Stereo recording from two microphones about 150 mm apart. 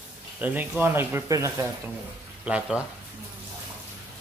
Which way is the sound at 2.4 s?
5° right (ahead or behind).